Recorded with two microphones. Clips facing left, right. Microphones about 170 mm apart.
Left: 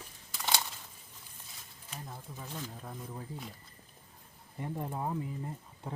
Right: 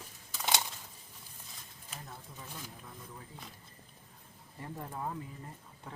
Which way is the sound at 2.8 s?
30° left (ahead or behind).